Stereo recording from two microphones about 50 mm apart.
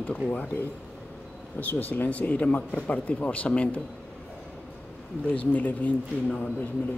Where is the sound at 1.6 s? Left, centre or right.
Left.